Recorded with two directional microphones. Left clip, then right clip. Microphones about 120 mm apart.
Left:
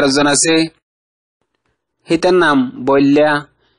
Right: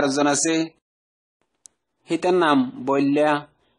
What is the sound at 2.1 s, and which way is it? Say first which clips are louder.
Speech: left 7 dB; 25° left (ahead or behind).